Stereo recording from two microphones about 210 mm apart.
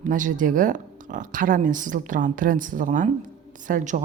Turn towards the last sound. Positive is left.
turn(degrees=-35)  # may be behind; listen again after turning